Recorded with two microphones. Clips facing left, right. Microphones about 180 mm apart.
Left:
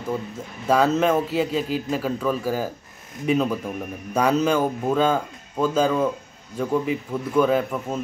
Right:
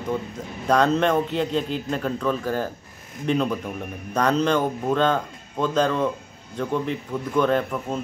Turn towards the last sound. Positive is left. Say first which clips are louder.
# left 1 dB
turn(degrees=5)  # may be behind; listen again after turning